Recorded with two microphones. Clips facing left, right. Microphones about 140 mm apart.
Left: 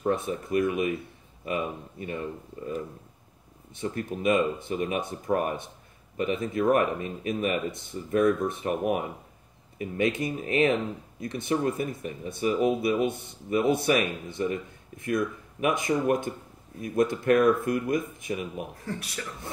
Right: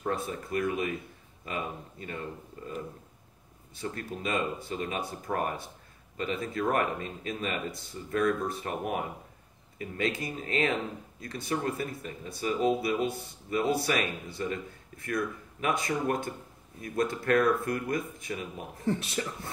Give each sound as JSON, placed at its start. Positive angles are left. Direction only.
{"t": 0.0, "sound": "speech", "side_deg": 20}
{"t": 2.0, "sound": "speech", "side_deg": 20}
{"t": 3.7, "sound": "speech", "side_deg": 20}
{"t": 18.8, "sound": "speech", "side_deg": -25}